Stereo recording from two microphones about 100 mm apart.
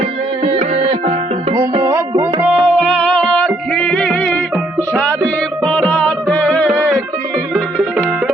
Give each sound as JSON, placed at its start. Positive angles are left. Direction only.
{"t": 0.0, "sound": "music", "side_deg": -75}
{"t": 1.8, "sound": "music", "side_deg": -25}
{"t": 2.6, "sound": "music", "side_deg": 0}
{"t": 6.7, "sound": "music", "side_deg": -10}